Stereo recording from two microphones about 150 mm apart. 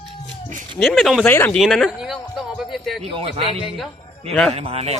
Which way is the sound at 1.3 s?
15° left (ahead or behind).